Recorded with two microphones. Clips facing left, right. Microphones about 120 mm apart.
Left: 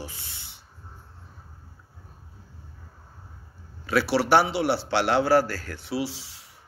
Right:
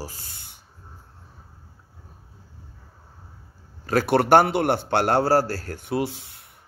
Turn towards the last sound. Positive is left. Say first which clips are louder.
# right 3 dB
turn(degrees=-55)  # may be behind; listen again after turning